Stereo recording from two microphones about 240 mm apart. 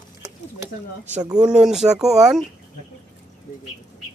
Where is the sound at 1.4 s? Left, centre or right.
Centre.